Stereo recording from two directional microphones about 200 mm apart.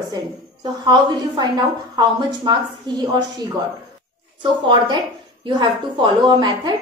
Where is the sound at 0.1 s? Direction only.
20° right (ahead or behind).